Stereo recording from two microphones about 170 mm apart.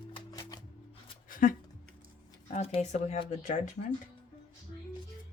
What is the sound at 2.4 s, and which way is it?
Speech, 40° left (ahead or behind).